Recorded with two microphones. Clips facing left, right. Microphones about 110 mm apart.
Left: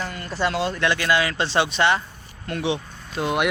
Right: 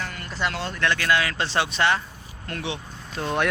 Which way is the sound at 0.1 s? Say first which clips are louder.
Left 4 dB; 25° left (ahead or behind).